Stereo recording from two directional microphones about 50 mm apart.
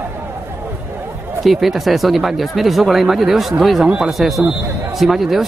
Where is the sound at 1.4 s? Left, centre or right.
Centre.